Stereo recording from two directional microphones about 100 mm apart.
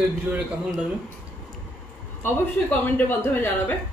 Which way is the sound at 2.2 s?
20° left (ahead or behind).